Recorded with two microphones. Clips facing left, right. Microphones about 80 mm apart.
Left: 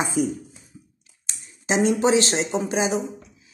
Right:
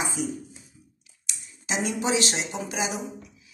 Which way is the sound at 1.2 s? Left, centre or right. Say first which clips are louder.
Left 7 dB; left.